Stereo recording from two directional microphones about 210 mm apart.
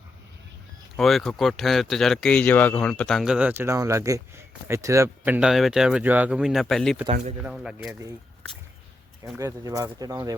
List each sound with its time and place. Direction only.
0.9 s speech: centre (ahead or behind)
7.0 s speech: 30° right (ahead or behind)
7.4 s speech: 5° right (ahead or behind)
9.4 s speech: 15° right (ahead or behind)